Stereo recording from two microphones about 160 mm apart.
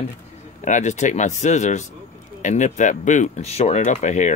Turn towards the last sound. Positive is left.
turn(degrees=50)  # may be behind; listen again after turning